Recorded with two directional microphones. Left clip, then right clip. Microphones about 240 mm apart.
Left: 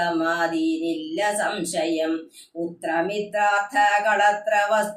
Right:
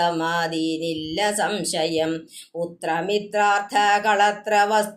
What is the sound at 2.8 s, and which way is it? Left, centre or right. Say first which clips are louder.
Mantra: right 1 dB; right.